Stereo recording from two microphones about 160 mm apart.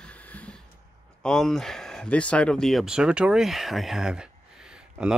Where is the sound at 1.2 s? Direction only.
5° left (ahead or behind).